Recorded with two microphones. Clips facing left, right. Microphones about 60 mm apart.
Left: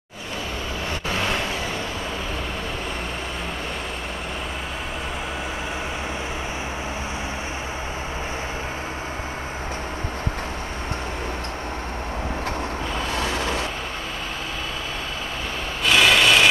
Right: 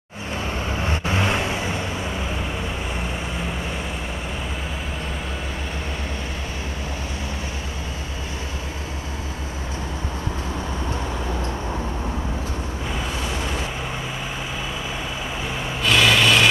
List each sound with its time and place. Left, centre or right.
0.8 s vehicle: centre
13.2 s vehicle: left
15.8 s vehicle: centre